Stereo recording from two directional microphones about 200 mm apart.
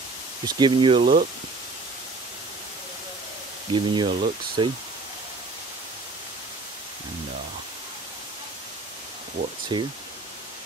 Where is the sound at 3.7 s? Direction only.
25° right (ahead or behind).